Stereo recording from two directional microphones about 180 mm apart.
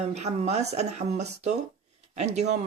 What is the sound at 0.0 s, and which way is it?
Speech, 35° right (ahead or behind).